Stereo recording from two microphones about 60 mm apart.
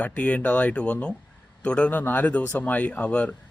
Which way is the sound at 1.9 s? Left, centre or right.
Left.